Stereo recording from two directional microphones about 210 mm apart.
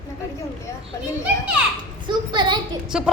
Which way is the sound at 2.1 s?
20° right (ahead or behind).